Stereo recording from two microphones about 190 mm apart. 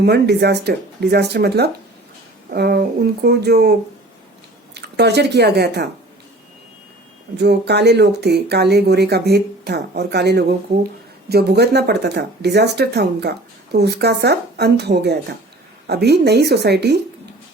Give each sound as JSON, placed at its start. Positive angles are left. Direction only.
{"t": 0.0, "sound": "speech", "side_deg": -60}
{"t": 7.3, "sound": "speech", "side_deg": -60}